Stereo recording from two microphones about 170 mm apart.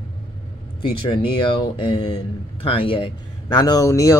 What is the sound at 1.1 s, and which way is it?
Speech, 30° left (ahead or behind).